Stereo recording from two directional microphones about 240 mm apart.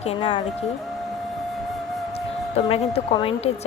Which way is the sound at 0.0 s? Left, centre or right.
Left.